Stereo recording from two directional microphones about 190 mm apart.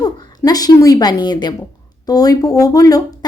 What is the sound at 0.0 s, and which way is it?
A woman's voice, 20° left (ahead or behind).